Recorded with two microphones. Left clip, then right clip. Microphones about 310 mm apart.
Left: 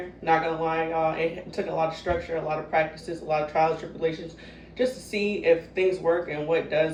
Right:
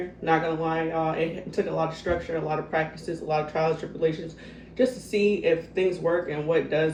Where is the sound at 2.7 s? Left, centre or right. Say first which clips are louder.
Left 2 dB; centre.